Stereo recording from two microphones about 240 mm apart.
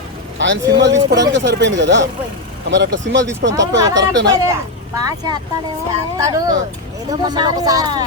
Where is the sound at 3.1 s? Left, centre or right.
Right.